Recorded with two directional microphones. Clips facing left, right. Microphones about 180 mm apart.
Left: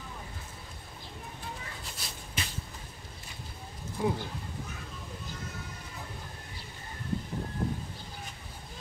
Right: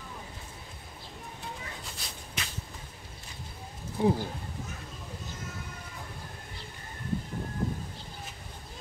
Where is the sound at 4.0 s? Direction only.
25° right (ahead or behind).